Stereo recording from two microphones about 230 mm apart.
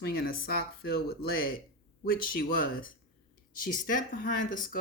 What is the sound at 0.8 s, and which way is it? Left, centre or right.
Speech, left.